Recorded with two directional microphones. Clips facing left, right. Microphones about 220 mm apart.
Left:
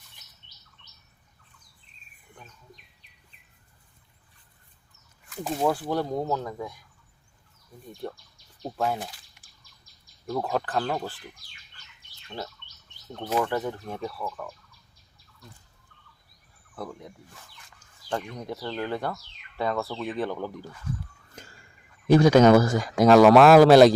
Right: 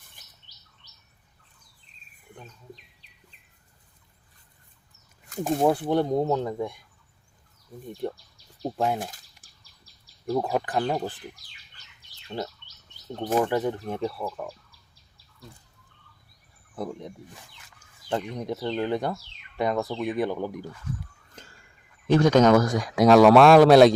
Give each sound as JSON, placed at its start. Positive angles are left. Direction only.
{"t": 5.4, "sound": "speech", "side_deg": -20}
{"t": 8.0, "sound": "speech", "side_deg": -20}
{"t": 9.0, "sound": "a sound", "side_deg": -45}
{"t": 10.3, "sound": "speech", "side_deg": -15}
{"t": 13.4, "sound": "speech", "side_deg": -15}
{"t": 16.7, "sound": "speech", "side_deg": -20}
{"t": 22.0, "sound": "speech", "side_deg": 10}